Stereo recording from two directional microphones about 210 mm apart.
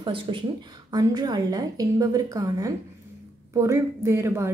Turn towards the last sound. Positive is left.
turn(degrees=-10)  # may be behind; listen again after turning